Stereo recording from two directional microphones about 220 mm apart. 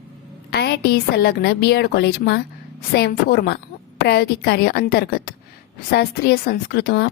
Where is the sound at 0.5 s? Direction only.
45° left (ahead or behind).